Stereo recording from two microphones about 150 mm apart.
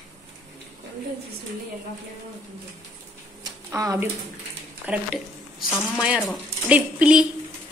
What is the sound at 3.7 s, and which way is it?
Speech, 20° right (ahead or behind).